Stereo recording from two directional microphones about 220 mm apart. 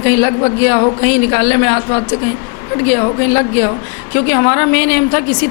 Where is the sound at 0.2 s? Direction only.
15° left (ahead or behind).